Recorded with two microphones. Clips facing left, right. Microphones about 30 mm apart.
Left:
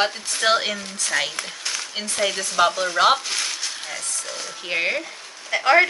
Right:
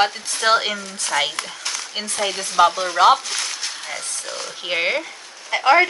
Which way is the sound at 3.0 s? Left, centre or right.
Centre.